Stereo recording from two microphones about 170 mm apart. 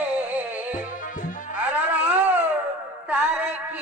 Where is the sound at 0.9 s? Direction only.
50° left (ahead or behind).